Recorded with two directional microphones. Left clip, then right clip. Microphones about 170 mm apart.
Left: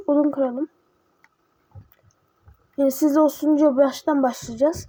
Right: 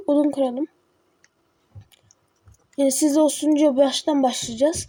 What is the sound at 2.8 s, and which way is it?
Speech, 5° right (ahead or behind).